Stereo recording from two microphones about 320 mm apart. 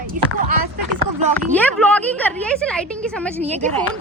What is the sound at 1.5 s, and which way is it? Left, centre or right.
Speech, centre.